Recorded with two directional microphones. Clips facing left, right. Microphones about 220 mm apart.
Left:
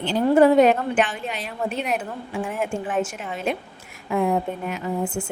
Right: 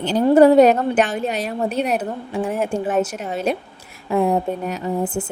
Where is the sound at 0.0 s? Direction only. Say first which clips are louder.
Right 4 dB; 40° right (ahead or behind).